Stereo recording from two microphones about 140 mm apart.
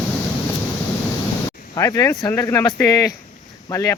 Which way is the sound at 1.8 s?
25° left (ahead or behind).